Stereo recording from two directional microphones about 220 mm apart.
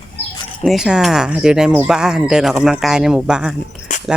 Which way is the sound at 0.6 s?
Centre (ahead or behind).